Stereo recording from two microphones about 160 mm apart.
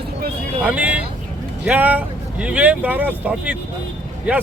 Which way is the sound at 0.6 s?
10° right (ahead or behind).